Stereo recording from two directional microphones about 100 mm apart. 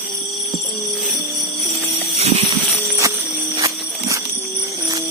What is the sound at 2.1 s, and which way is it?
Music, 90° right.